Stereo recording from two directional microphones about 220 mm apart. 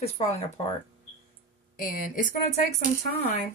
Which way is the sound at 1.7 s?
40° left (ahead or behind).